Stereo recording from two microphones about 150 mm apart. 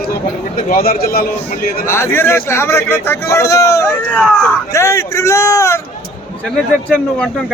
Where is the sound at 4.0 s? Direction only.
10° left (ahead or behind).